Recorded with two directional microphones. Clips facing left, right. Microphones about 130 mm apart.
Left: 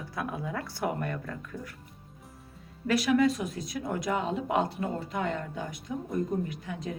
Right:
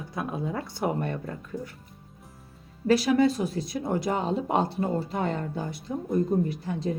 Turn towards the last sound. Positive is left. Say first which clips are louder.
# right 6 dB
turn(degrees=-35)  # may be behind; listen again after turning